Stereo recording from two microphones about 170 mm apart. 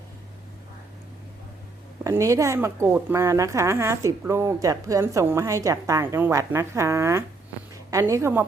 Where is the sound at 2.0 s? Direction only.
20° right (ahead or behind).